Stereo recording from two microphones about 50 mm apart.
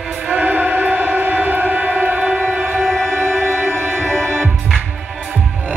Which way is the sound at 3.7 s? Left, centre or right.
Right.